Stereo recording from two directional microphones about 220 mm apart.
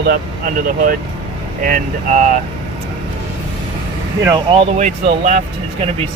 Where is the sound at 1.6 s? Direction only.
35° right (ahead or behind).